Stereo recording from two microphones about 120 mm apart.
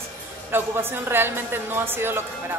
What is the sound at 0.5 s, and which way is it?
A woman's voice, 20° right (ahead or behind).